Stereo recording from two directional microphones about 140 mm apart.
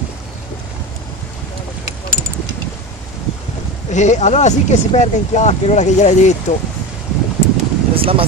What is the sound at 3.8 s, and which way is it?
Speech, 55° left (ahead or behind).